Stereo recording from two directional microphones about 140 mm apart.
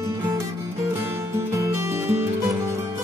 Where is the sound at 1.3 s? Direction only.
20° right (ahead or behind).